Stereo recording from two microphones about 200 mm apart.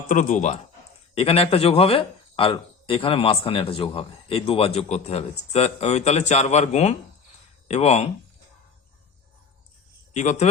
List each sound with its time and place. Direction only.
0.1 s a man's voice: 40° left (ahead or behind)
10.2 s speech: 35° left (ahead or behind)